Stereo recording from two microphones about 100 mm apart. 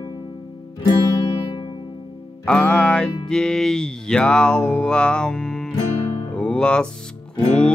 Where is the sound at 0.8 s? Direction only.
45° left (ahead or behind).